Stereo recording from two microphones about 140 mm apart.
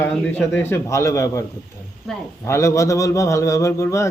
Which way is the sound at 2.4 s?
20° left (ahead or behind).